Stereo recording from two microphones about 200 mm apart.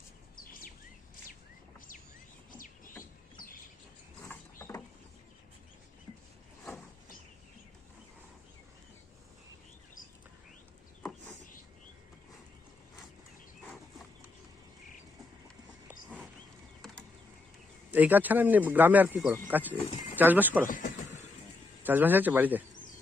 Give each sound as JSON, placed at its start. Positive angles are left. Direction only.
{"t": 2.5, "sound": "bird", "side_deg": 40}
{"t": 4.2, "sound": "rodents", "side_deg": 10}
{"t": 17.9, "sound": "speech", "side_deg": -10}
{"t": 20.7, "sound": "speech", "side_deg": 40}
{"t": 21.8, "sound": "speech", "side_deg": -10}